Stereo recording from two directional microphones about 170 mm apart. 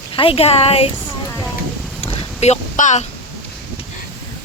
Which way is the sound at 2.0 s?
40° left (ahead or behind).